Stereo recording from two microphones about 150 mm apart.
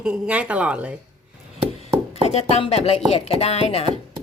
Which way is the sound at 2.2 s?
45° left (ahead or behind).